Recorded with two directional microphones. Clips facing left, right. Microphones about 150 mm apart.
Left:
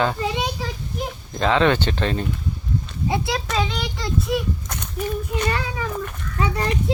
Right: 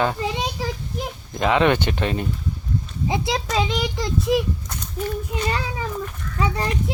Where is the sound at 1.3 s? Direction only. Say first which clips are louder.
Even; 15° right (ahead or behind).